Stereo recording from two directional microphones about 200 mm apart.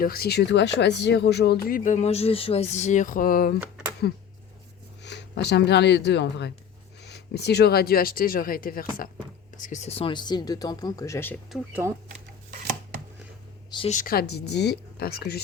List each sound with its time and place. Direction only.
0.0 s speech: 50° left (ahead or behind)
5.0 s speech: 55° left (ahead or behind); by 11.3 s 10° left (ahead or behind)
11.5 s speech: 10° right (ahead or behind)
13.7 s a sound: 25° left (ahead or behind)
13.9 s speech: 45° left (ahead or behind)